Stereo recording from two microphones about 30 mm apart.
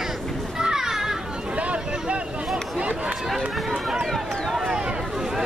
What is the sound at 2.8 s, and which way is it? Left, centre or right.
Run, right.